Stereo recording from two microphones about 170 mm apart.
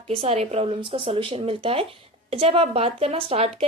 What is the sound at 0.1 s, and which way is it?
Speech, 35° right (ahead or behind).